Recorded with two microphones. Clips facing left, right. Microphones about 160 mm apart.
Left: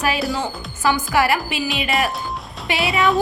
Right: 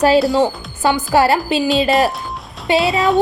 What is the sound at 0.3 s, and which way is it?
A woman's voice, 25° right (ahead or behind).